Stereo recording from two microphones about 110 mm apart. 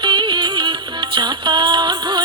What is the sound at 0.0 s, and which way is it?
Music, 45° right (ahead or behind).